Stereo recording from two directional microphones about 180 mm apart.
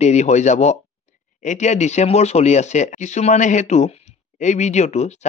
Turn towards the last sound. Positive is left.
turn(degrees=40)  # may be behind; listen again after turning